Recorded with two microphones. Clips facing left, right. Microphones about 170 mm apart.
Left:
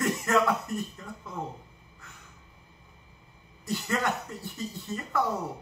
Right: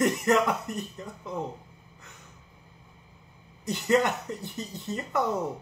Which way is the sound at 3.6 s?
20° right (ahead or behind).